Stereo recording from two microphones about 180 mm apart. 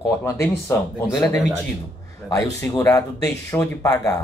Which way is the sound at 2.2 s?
20° left (ahead or behind).